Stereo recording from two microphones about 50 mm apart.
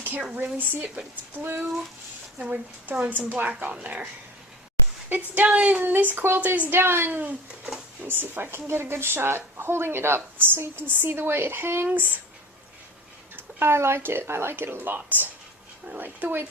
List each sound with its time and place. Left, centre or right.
0.3 s a woman's voice: right
2.4 s a woman's voice: right
5.0 s a woman's voice: right
5.8 s a woman's voice: right
6.4 s a woman's voice: right
6.7 s a woman's voice: right
7.2 s speech: right
8.0 s a woman's voice: right
11.9 s a woman's voice: right
13.3 s a sound: right
14.0 s a woman's voice: right